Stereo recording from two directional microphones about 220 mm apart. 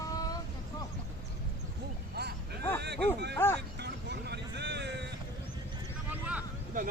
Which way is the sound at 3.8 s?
50° right (ahead or behind).